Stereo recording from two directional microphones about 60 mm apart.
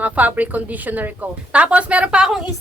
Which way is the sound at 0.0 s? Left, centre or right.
Right.